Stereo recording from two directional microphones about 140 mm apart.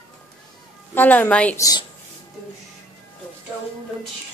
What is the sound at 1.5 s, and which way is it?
Speech, 25° left (ahead or behind).